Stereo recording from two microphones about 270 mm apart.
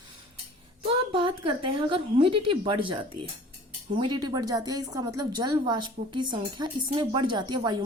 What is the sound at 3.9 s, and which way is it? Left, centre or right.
A woman's voice, centre.